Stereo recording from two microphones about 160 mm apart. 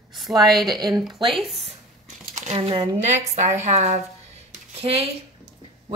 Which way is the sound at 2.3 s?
45° right (ahead or behind).